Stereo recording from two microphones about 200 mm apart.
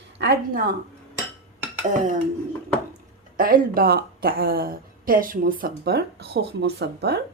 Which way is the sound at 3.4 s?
45° right (ahead or behind).